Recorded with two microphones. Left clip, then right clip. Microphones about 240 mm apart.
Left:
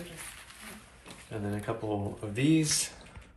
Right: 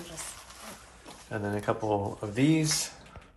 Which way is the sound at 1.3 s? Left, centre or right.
Right.